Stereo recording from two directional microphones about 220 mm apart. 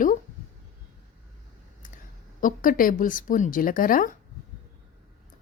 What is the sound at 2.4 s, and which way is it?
A woman's voice, 40° left (ahead or behind).